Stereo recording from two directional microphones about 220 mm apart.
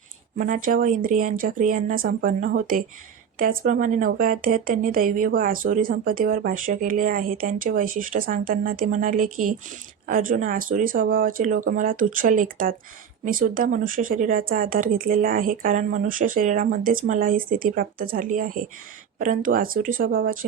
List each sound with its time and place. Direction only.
0.3 s speech: 40° right (ahead or behind)